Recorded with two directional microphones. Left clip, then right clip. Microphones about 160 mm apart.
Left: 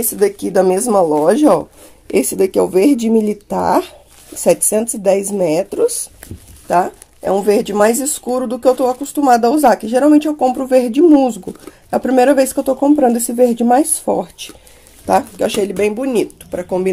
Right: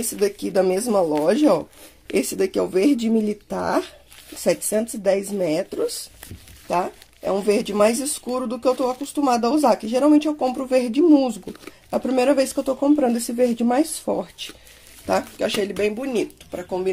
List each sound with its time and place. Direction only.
0.0 s speech: centre (ahead or behind); by 16.9 s 20° left (ahead or behind)